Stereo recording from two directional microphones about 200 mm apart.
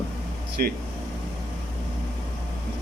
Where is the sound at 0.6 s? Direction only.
45° right (ahead or behind).